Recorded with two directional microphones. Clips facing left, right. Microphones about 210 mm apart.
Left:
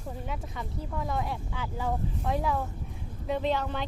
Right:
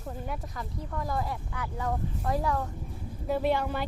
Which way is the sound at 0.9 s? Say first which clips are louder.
Even; centre (ahead or behind).